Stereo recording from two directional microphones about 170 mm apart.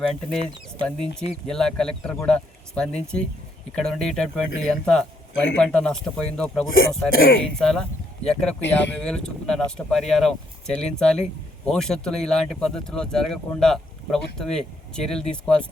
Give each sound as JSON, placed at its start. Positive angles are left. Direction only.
{"t": 0.0, "sound": "speech", "side_deg": 5}
{"t": 6.7, "sound": "speech", "side_deg": 60}
{"t": 7.4, "sound": "speech", "side_deg": 5}